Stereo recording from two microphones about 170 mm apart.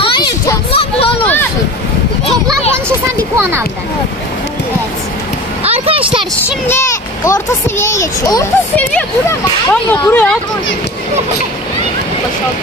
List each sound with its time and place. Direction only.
0.0 s a sound: 30° left (ahead or behind)
3.3 s a child's voice: 15° right (ahead or behind)
5.6 s speech: 35° right (ahead or behind)
6.7 s a child's voice: 15° left (ahead or behind)